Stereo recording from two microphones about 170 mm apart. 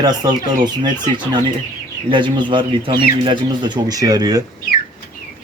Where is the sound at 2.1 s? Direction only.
30° right (ahead or behind).